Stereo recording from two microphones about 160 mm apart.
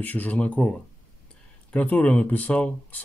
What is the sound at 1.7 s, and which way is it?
Speech, 10° left (ahead or behind).